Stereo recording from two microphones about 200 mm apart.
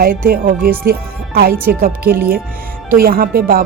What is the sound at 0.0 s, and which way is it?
A woman's voice, 45° right (ahead or behind).